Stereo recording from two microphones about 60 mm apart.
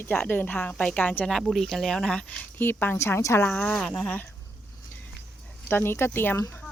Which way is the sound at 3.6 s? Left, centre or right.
Centre.